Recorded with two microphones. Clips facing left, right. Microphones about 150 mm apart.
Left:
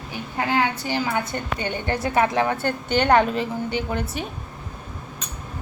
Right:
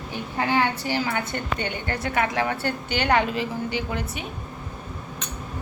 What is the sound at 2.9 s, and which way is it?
Speech, 50° left (ahead or behind).